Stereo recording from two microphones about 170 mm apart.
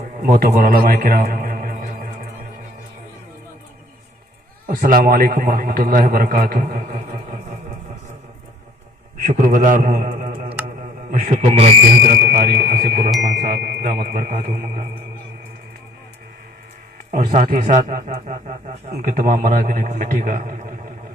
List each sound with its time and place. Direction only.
0.0 s a sound: 55° right (ahead or behind)
4.7 s a man's voice: 55° right (ahead or behind)
9.2 s a man's voice: 50° right (ahead or behind)
17.1 s speech: 50° right (ahead or behind)